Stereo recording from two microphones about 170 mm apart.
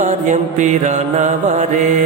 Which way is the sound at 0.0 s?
45° right (ahead or behind).